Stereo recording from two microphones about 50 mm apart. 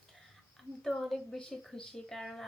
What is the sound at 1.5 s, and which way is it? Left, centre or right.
Speech, centre.